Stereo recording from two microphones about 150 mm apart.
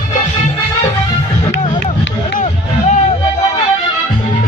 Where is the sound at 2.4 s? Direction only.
55° left (ahead or behind).